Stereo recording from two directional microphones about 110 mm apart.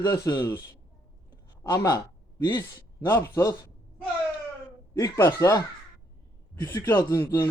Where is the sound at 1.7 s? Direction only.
30° left (ahead or behind).